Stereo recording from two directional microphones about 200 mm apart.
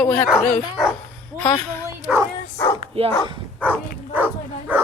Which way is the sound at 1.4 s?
10° left (ahead or behind).